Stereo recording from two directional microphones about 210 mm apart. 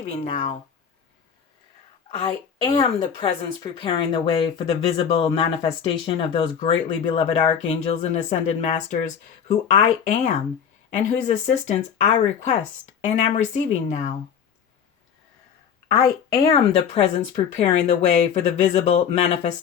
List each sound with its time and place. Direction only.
0.0 s speech: 35° left (ahead or behind)
2.2 s speech: 25° left (ahead or behind)
16.0 s a woman's voice: 15° left (ahead or behind)
16.5 s speech: 30° left (ahead or behind)